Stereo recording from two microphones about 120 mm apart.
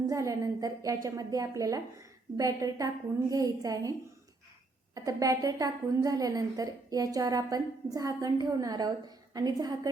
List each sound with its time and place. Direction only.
0.1 s a woman's voice: 25° right (ahead or behind)
4.9 s a woman's voice: 30° right (ahead or behind)